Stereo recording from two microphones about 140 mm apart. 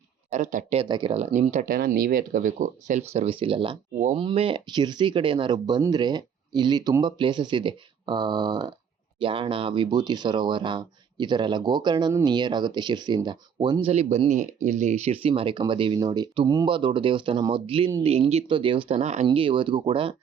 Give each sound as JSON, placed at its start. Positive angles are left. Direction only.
{"t": 0.3, "sound": "speech", "side_deg": -60}
{"t": 0.8, "sound": "speech", "side_deg": -35}
{"t": 1.1, "sound": "speech", "side_deg": -55}
{"t": 13.9, "sound": "speech", "side_deg": -50}